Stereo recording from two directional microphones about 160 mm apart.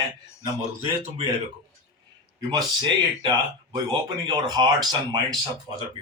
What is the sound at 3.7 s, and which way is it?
Speech, 30° right (ahead or behind).